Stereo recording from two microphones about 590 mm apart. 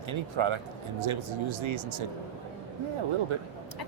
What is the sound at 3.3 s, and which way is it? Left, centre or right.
Speech, right.